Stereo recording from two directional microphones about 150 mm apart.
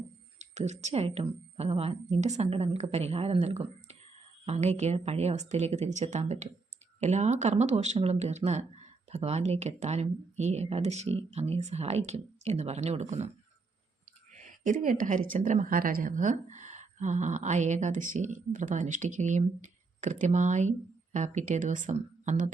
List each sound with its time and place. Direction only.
0.5 s a woman's voice: 50° right (ahead or behind)
14.3 s a woman's voice: 55° right (ahead or behind)